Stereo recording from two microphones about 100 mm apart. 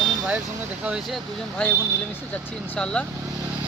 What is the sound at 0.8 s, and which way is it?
Speech, 10° right (ahead or behind).